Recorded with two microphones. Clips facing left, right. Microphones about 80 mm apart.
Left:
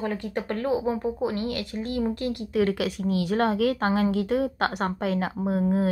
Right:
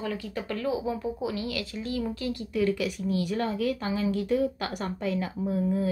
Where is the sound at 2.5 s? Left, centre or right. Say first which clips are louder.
Left 2 dB; left.